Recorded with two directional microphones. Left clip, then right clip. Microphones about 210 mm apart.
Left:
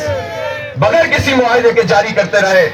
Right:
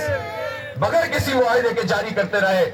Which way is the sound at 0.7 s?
45° left (ahead or behind).